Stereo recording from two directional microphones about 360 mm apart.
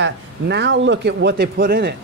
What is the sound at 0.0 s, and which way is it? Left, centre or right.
Speech, right.